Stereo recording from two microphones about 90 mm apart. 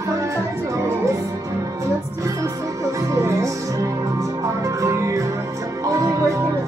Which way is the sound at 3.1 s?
35° right (ahead or behind).